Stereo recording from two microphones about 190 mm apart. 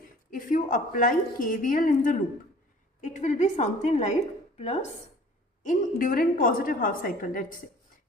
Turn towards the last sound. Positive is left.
turn(degrees=45)  # may be behind; listen again after turning